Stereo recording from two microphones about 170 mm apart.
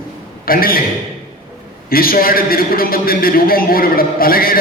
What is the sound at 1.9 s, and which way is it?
A man's voice, 60° left (ahead or behind).